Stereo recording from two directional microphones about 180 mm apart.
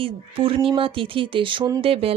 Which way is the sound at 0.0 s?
30° right (ahead or behind).